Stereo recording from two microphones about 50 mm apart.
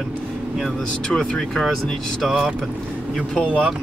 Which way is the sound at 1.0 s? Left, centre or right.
Centre.